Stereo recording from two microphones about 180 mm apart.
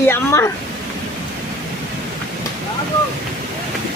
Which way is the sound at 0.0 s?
15° left (ahead or behind).